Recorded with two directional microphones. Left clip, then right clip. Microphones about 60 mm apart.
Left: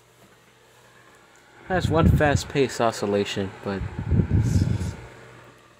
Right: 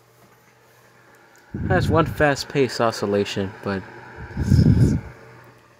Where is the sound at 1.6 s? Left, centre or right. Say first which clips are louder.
Right 3 dB; right.